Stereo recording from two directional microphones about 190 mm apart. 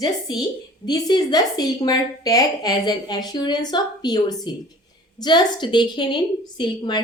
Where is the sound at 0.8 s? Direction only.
20° left (ahead or behind).